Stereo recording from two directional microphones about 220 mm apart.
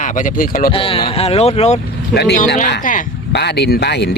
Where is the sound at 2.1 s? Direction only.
50° left (ahead or behind).